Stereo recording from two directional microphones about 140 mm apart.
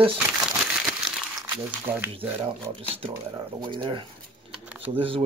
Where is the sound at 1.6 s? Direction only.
10° right (ahead or behind).